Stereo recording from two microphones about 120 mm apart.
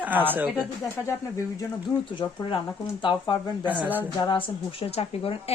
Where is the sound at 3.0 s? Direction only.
40° left (ahead or behind).